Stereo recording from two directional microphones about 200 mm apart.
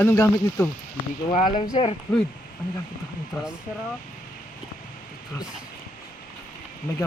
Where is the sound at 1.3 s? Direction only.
25° left (ahead or behind).